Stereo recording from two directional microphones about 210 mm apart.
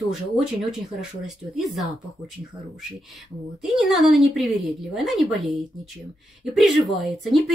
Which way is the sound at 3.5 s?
Centre (ahead or behind).